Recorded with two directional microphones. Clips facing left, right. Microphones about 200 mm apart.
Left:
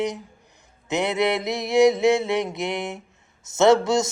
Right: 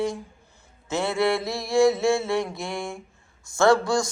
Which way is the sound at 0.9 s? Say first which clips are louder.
Left 1 dB; 20° left (ahead or behind).